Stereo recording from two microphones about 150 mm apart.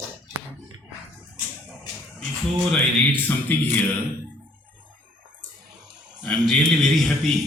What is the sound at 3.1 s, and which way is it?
Speech, 15° left (ahead or behind).